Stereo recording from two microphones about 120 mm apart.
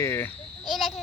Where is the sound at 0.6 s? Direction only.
Centre (ahead or behind).